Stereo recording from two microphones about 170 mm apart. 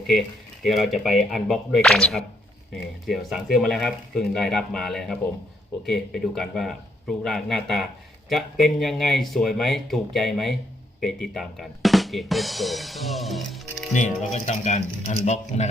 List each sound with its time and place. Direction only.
0.6 s speech: centre (ahead or behind)
11.0 s drum: centre (ahead or behind)
13.9 s speech: 45° left (ahead or behind)